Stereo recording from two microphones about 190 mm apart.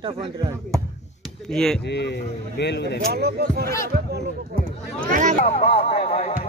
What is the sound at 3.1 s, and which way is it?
Speech, 55° right (ahead or behind).